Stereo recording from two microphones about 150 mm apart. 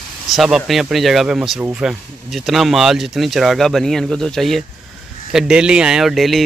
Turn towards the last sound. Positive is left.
turn(degrees=0)  # may be behind; listen again after turning